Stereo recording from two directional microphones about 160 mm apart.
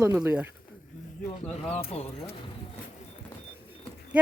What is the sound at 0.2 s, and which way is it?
Speech, 5° right (ahead or behind).